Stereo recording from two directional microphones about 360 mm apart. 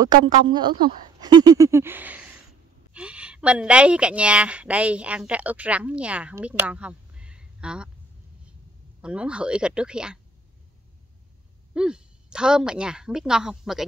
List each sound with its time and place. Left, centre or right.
0.0 s a woman's voice: centre
9.0 s a woman's voice: centre
11.7 s a woman's voice: centre